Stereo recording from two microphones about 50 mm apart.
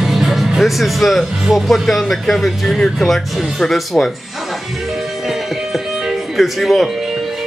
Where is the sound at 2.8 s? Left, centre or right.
Centre.